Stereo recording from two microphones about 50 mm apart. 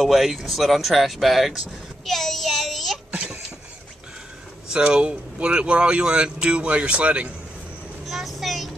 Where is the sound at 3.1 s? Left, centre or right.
Right.